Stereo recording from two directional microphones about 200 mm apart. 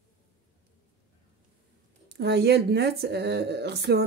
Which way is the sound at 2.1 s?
55° right (ahead or behind).